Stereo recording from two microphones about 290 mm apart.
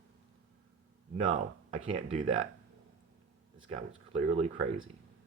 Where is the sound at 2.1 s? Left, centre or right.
Right.